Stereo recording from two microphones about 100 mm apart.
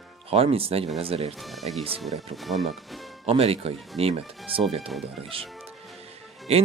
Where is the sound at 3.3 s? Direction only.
80° right.